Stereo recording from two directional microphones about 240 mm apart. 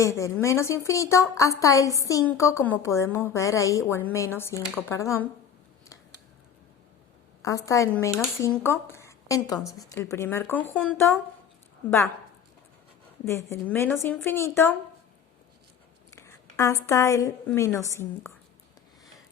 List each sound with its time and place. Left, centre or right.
0.0 s a woman's voice: centre
7.4 s a woman's voice: centre
13.2 s a woman's voice: centre
16.1 s a sound: centre
16.8 s a woman's voice: centre